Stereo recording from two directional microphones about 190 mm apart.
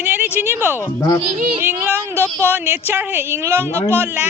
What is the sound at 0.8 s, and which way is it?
Speech, 15° left (ahead or behind).